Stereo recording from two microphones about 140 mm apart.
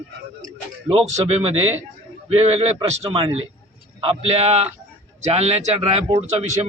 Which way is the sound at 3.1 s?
35° right (ahead or behind).